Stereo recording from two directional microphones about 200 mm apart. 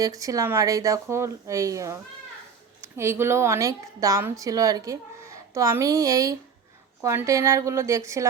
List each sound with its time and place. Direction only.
0.0 s a woman's voice: 15° right (ahead or behind)